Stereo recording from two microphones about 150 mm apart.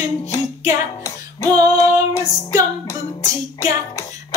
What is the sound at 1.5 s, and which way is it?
Female singing, 25° right (ahead or behind).